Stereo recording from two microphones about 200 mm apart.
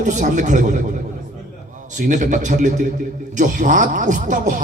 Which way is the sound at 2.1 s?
40° right (ahead or behind).